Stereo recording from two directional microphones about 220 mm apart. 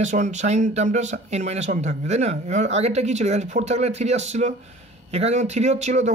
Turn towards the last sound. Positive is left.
turn(degrees=-30)  # may be behind; listen again after turning